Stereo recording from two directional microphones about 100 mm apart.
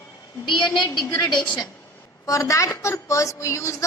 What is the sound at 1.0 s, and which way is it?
Speech, 40° left (ahead or behind).